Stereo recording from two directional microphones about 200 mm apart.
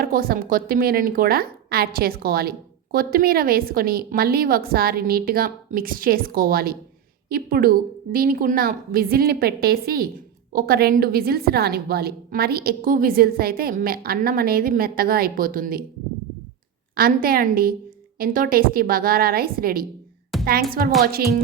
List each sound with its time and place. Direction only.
0.0 s a woman's voice: 45° right (ahead or behind)
16.9 s a woman's voice: 45° right (ahead or behind)